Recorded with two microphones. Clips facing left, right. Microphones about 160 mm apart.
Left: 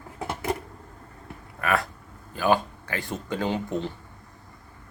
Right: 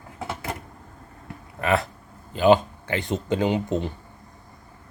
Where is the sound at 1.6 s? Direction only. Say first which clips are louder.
Right 3 dB; 25° right (ahead or behind).